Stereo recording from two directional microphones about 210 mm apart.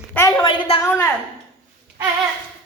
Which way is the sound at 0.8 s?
10° left (ahead or behind).